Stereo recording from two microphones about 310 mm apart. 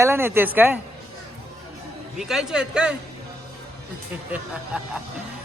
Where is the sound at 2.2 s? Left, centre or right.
Centre.